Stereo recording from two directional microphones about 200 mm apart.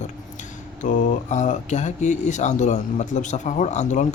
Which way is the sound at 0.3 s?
40° left (ahead or behind).